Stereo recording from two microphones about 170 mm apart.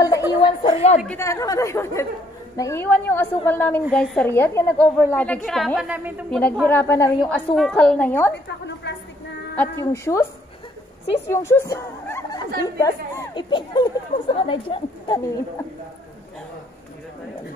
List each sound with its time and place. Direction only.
0.0 s a sound: 20° left (ahead or behind); by 1.0 s 40° left (ahead or behind)
1.0 s a woman's voice: 15° left (ahead or behind); by 6.2 s 10° right (ahead or behind)
6.6 s a woman's voice: 10° left (ahead or behind)
8.8 s a sound: 90° left
9.6 s a woman's voice: 15° left (ahead or behind)
11.2 s speech: 15° left (ahead or behind); by 14.8 s 30° left (ahead or behind)